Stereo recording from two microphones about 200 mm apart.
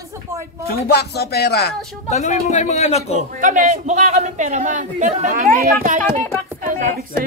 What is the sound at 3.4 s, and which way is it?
A man's voice, 40° right (ahead or behind).